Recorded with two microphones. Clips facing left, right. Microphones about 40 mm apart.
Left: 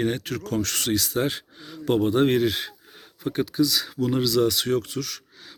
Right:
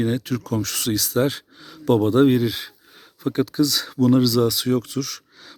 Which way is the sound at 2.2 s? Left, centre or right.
Left.